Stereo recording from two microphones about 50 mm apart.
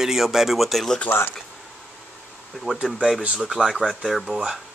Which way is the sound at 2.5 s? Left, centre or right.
Centre.